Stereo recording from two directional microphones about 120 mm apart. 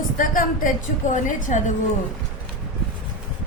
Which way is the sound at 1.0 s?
90° left.